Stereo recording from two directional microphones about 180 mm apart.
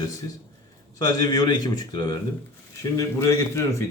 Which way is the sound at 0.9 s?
20° left (ahead or behind).